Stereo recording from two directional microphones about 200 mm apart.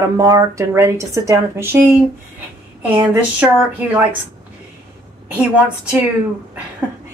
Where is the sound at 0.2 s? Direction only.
15° right (ahead or behind).